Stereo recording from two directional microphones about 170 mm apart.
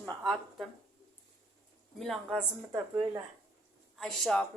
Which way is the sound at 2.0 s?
Centre (ahead or behind).